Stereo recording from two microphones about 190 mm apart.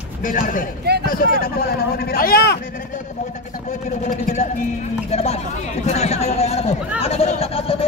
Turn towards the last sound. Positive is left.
turn(degrees=30)  # may be behind; listen again after turning